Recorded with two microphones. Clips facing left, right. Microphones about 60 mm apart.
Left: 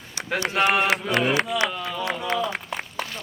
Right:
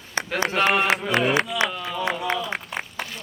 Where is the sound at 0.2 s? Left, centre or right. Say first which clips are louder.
Right 8 dB; right.